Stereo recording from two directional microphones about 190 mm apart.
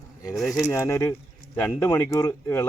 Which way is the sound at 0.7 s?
15° left (ahead or behind).